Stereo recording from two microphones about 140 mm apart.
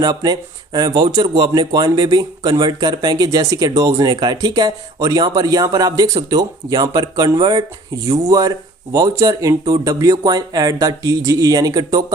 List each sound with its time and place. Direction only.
0.0 s speech: 30° right (ahead or behind)